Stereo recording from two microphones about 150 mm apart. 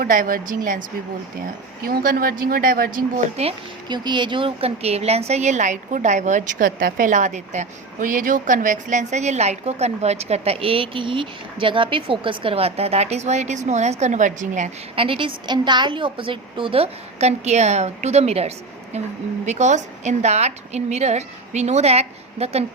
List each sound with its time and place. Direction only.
0.0 s a woman's voice: 65° right (ahead or behind)
1.8 s a woman's voice: 75° right (ahead or behind)
3.4 s a woman's voice: 45° right (ahead or behind)
3.8 s a woman's voice: 30° right (ahead or behind); by 14.7 s 55° right (ahead or behind)
14.9 s a woman's voice: 35° right (ahead or behind)